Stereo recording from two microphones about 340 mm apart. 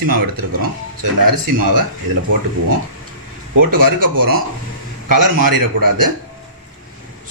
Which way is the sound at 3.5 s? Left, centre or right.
Right.